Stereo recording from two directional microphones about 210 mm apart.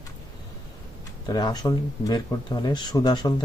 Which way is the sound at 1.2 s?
20° left (ahead or behind).